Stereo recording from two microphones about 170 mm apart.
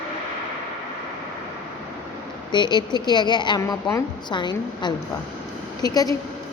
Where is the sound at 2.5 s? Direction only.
25° left (ahead or behind).